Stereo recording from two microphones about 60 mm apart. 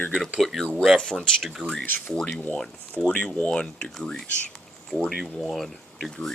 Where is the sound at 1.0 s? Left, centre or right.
Centre.